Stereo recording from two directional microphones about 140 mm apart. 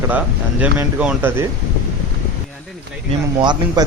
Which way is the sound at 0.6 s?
10° right (ahead or behind).